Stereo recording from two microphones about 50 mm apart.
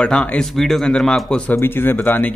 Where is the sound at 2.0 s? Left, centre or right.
Left.